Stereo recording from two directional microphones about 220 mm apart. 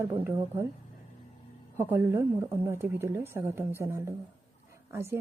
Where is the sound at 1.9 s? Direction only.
10° right (ahead or behind).